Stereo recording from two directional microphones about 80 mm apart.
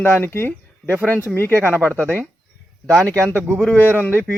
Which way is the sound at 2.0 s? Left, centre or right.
Right.